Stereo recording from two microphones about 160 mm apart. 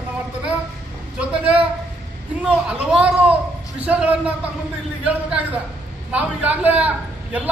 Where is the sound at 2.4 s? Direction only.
5° right (ahead or behind).